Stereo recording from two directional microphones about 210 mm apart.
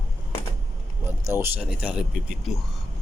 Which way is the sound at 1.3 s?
10° right (ahead or behind).